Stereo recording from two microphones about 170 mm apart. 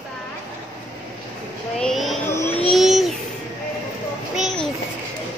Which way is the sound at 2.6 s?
Centre (ahead or behind).